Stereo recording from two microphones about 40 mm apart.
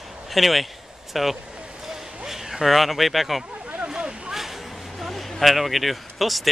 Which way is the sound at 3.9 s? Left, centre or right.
Centre.